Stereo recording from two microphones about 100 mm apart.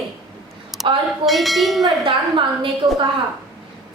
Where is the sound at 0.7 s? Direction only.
5° right (ahead or behind).